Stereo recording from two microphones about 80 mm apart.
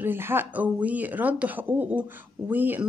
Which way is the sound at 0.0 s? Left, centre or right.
Right.